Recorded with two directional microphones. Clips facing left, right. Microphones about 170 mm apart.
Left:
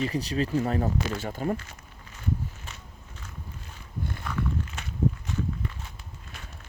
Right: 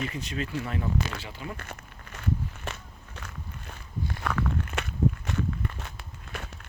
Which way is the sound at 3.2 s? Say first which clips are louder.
Right 5 dB; 75° right (ahead or behind).